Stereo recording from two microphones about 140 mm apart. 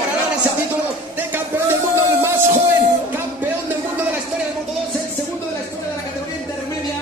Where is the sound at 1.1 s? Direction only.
15° right (ahead or behind).